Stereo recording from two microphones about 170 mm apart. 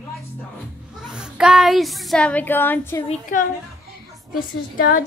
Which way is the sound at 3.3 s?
50° left (ahead or behind).